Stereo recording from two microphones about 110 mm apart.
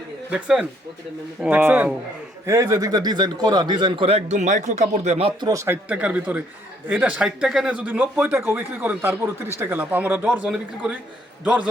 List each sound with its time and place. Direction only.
0.3 s speech: 10° right (ahead or behind)
1.4 s speech: 15° right (ahead or behind)
2.5 s a man's voice: 30° right (ahead or behind); by 4.1 s 50° right (ahead or behind)
4.1 s a man's voice: 90° right
5.4 s a man's voice: 30° right (ahead or behind)
5.9 s speech: 10° right (ahead or behind)